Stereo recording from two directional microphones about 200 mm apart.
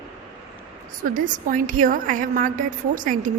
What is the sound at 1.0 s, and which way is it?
A woman's voice, 40° right (ahead or behind).